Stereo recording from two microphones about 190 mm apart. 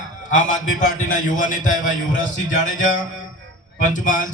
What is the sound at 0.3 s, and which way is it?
A man's voice, 40° left (ahead or behind).